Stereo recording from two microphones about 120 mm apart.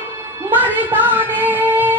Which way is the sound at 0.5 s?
15° right (ahead or behind).